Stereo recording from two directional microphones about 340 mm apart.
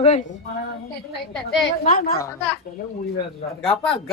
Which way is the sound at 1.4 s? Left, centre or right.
Left.